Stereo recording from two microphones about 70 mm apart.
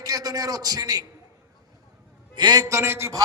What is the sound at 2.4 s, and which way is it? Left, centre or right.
Speech, right.